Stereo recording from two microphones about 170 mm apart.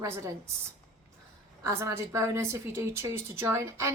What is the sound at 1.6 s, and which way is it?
A woman's voice, 15° right (ahead or behind).